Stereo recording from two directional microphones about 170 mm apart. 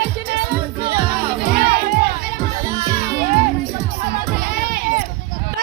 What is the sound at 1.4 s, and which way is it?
Music, 60° right (ahead or behind).